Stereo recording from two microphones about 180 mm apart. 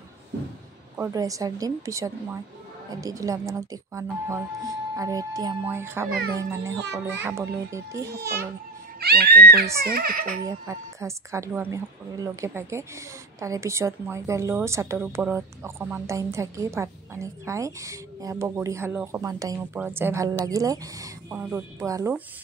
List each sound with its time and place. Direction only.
0.9 s a woman's voice: 15° right (ahead or behind)
6.0 s speech: 55° right (ahead or behind)
6.3 s a woman's voice: 15° right (ahead or behind)
9.0 s speech: 60° right (ahead or behind)
10.4 s a woman's voice: 15° right (ahead or behind)